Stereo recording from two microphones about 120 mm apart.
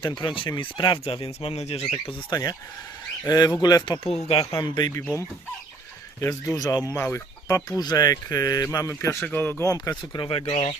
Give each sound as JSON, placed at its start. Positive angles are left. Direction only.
{"t": 0.0, "sound": "speech", "side_deg": 40}
{"t": 1.0, "sound": "speech", "side_deg": 55}
{"t": 2.3, "sound": "speech", "side_deg": 30}
{"t": 4.0, "sound": "speech", "side_deg": 55}
{"t": 4.6, "sound": "speech", "side_deg": 40}
{"t": 6.1, "sound": "speech", "side_deg": 25}
{"t": 6.9, "sound": "speech", "side_deg": 20}
{"t": 7.8, "sound": "speech", "side_deg": 35}
{"t": 9.6, "sound": "speech", "side_deg": 30}